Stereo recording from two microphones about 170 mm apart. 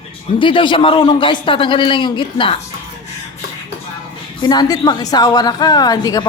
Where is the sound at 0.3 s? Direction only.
30° left (ahead or behind).